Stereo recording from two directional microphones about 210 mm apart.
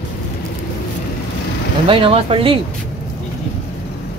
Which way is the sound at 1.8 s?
25° right (ahead or behind).